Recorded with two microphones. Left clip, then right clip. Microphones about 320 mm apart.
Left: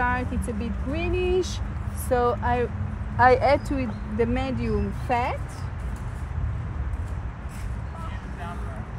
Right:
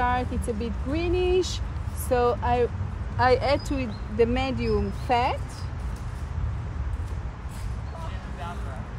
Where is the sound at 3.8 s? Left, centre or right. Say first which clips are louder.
Right 2 dB; centre.